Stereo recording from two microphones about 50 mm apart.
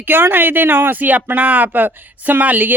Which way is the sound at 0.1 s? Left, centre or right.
Right.